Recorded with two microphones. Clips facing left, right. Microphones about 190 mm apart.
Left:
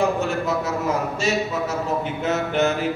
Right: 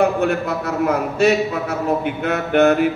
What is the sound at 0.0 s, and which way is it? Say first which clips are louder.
A man's voice: right 4 dB; 60° right (ahead or behind).